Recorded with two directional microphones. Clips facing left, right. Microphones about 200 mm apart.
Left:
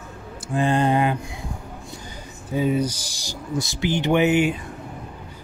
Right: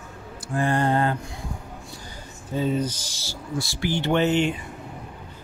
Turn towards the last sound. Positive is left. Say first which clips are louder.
# left 3 dB
turn(degrees=10)  # may be behind; listen again after turning